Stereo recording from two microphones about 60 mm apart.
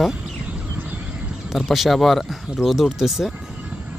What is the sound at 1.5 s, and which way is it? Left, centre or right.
Speech, centre.